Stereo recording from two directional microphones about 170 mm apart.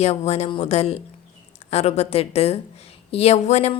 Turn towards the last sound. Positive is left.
turn(degrees=40)  # may be behind; listen again after turning